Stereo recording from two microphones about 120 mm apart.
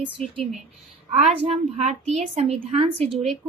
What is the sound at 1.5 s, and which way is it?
A woman's voice, 65° right (ahead or behind).